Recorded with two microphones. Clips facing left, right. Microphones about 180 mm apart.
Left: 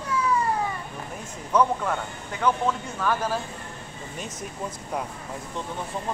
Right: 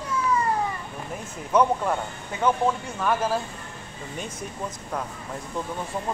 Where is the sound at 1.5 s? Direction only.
20° right (ahead or behind).